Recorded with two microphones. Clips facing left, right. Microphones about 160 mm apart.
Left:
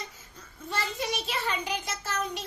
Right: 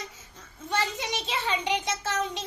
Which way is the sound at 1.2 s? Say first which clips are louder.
Right 2 dB; 25° right (ahead or behind).